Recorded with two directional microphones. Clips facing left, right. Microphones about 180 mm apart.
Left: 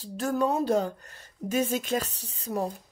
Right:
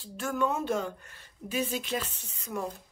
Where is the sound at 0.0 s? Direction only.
35° left (ahead or behind).